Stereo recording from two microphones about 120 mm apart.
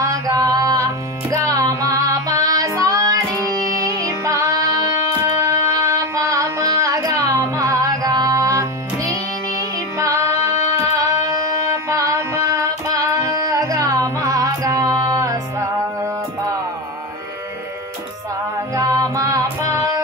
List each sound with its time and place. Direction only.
0.0 s a sound: 30° right (ahead or behind)
1.3 s female singing: 30° right (ahead or behind)
9.6 s music: 25° right (ahead or behind)
18.8 s music: 30° right (ahead or behind)
19.6 s female singing: 25° right (ahead or behind)